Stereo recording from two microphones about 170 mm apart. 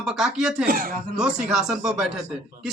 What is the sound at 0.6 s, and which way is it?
Speech, 55° right (ahead or behind).